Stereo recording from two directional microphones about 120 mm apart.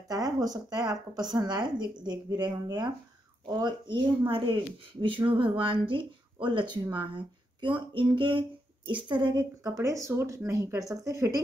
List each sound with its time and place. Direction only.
0.1 s speech: 30° right (ahead or behind)